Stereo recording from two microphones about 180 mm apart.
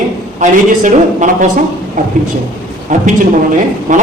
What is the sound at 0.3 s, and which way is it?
Mantra, 45° right (ahead or behind).